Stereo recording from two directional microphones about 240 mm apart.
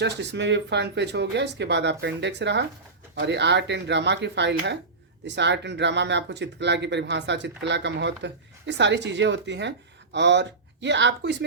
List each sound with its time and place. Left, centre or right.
0.0 s speech: right